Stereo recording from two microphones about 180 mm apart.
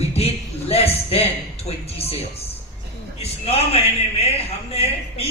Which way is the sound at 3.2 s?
35° left (ahead or behind).